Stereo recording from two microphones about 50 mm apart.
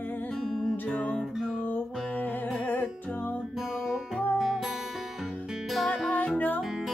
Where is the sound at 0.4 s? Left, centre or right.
Centre.